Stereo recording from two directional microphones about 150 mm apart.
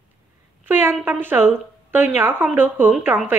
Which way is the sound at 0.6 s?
15° right (ahead or behind).